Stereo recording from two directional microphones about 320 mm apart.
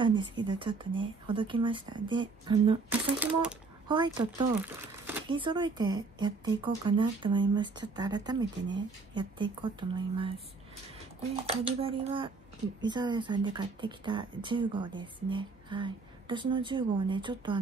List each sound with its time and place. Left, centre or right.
0.0 s speech: centre
3.9 s speech: centre